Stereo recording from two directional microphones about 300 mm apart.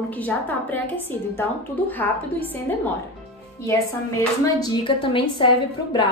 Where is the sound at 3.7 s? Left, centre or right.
Centre.